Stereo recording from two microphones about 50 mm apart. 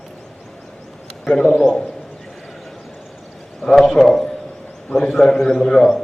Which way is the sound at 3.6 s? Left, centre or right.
Centre.